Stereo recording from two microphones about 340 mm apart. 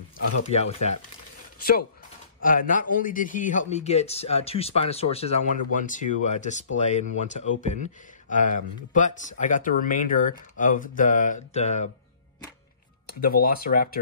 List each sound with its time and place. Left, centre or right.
0.5 s speech: centre
13.2 s speech: left